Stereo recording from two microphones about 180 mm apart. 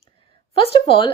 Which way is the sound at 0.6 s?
30° left (ahead or behind).